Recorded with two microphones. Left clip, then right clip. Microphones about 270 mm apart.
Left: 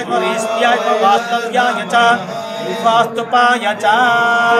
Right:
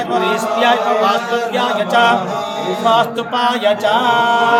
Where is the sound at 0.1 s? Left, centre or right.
Centre.